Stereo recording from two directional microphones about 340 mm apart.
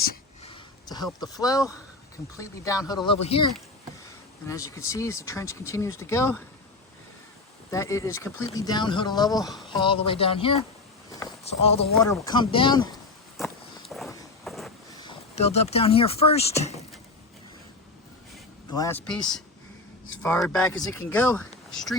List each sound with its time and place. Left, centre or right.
0.1 s a sound: centre
1.2 s speech: centre
4.4 s speech: centre
7.7 s speech: centre
11.1 s a sound: centre
11.9 s speech: centre
13.3 s walk: centre
14.9 s speech: centre
18.7 s speech: centre